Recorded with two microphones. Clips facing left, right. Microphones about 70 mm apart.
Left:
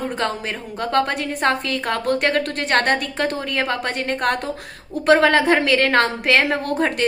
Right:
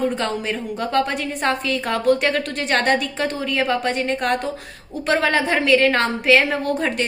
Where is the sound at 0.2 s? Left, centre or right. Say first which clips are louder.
Right 1 dB; left.